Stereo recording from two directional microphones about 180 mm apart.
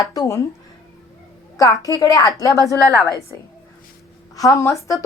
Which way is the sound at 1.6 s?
20° left (ahead or behind).